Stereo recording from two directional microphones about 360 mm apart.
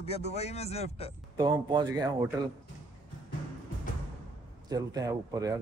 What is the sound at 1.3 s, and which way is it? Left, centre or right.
Speech, centre.